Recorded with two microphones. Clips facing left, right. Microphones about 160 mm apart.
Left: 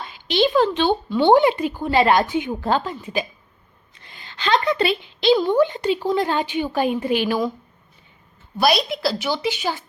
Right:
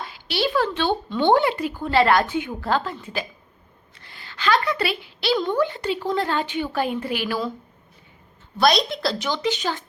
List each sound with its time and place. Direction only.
0.3 s speech: 20° left (ahead or behind)
8.5 s speech: 5° left (ahead or behind)